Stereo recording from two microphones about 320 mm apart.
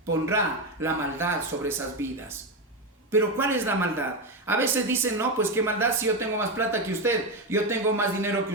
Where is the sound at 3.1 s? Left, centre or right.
Centre.